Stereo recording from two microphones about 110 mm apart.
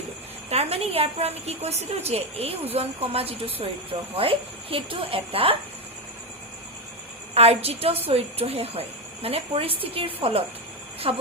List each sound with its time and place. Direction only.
0.5 s a woman's voice: 65° right (ahead or behind)
7.3 s speech: 65° right (ahead or behind)